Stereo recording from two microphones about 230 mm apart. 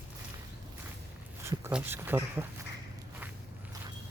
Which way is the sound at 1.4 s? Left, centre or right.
Centre.